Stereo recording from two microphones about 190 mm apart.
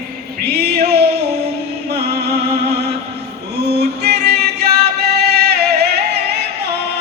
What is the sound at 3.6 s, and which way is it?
Music, 60° right (ahead or behind).